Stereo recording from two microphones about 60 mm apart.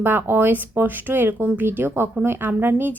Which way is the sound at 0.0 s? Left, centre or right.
Right.